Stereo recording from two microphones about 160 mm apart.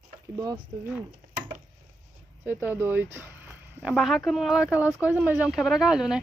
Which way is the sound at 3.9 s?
Centre (ahead or behind).